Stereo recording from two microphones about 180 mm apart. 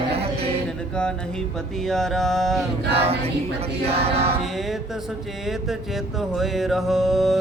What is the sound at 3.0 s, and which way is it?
Speech, 35° right (ahead or behind).